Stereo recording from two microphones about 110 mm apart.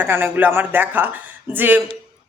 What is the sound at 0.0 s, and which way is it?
A woman's voice, 15° right (ahead or behind).